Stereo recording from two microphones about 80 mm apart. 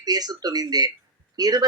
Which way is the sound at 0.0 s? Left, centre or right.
Right.